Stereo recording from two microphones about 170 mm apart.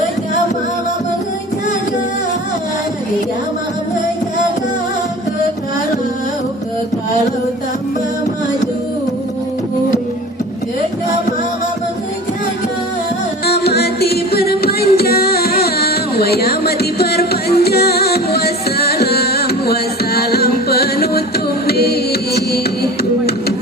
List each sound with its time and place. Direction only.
13.4 s music: 70° left (ahead or behind)